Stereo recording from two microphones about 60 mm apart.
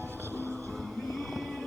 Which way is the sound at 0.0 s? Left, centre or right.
Right.